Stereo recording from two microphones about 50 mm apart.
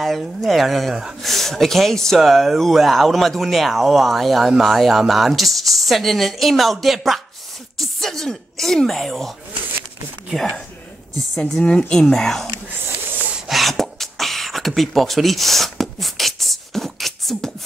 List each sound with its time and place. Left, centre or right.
0.0 s speech: centre
11.3 s speech: centre
11.6 s speech: left
12.0 s speech: centre
13.5 s beatboxing: centre